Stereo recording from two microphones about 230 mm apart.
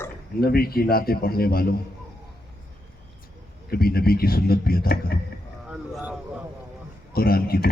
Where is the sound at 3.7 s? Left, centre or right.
Left.